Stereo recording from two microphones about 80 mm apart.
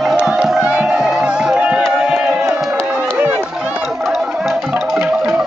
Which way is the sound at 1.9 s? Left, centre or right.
Right.